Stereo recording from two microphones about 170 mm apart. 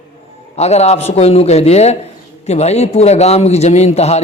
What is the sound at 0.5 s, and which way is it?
A man's voice, 40° left (ahead or behind).